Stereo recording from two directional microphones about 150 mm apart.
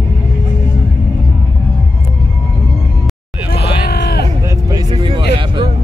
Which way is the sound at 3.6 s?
90° left.